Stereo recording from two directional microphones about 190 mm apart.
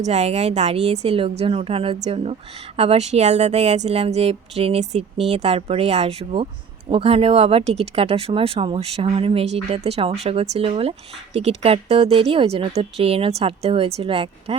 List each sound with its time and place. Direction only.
0.0 s speech: 35° right (ahead or behind)